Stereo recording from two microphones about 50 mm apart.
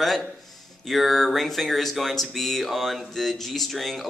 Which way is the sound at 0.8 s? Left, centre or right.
Centre.